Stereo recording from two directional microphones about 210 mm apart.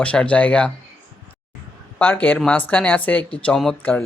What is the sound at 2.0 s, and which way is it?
Speech, 10° left (ahead or behind).